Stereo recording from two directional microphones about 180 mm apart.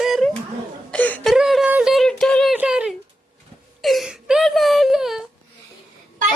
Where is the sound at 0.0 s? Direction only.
Centre (ahead or behind).